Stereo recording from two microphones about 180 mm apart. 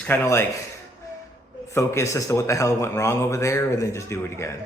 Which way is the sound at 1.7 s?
15° left (ahead or behind).